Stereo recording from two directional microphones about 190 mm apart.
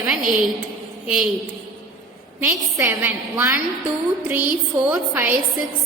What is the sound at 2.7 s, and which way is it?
A woman's voice, 15° right (ahead or behind).